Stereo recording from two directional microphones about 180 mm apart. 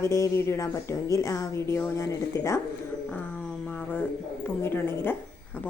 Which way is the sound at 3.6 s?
10° left (ahead or behind).